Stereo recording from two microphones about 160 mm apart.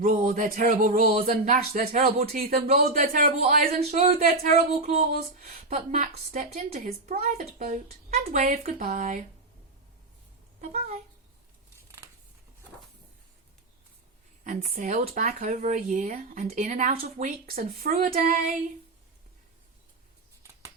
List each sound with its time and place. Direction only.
0.1 s speech: 50° right (ahead or behind)
2.2 s speech: 65° right (ahead or behind)
2.6 s speech: 50° right (ahead or behind)
7.3 s speech: 50° right (ahead or behind)
10.6 s speech: 45° right (ahead or behind)
14.4 s speech: 50° right (ahead or behind)
16.5 s speech: 50° right (ahead or behind)